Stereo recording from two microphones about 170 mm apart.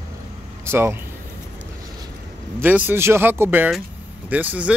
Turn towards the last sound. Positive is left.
turn(degrees=-10)  # may be behind; listen again after turning